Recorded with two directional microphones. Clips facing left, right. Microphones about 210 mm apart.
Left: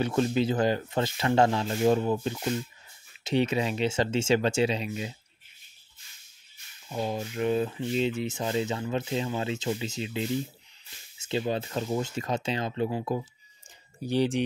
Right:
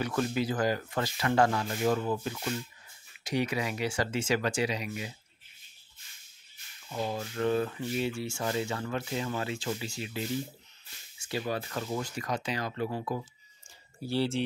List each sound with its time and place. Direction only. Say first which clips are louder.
0.0 s speech: left 5 dB; 25° left (ahead or behind)
6.9 s speech: left 3 dB; 20° left (ahead or behind)